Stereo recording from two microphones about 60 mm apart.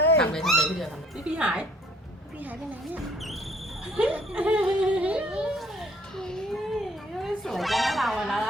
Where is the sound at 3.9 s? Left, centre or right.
Right.